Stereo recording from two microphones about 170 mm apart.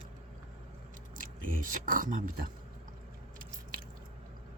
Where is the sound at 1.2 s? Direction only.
55° right (ahead or behind).